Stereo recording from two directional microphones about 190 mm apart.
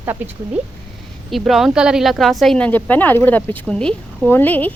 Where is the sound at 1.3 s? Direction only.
Centre (ahead or behind).